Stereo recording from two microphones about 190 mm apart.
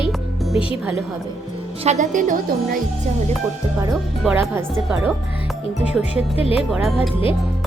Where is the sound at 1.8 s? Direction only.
40° right (ahead or behind).